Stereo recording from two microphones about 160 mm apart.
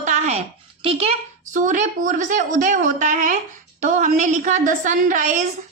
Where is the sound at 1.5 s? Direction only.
55° right (ahead or behind).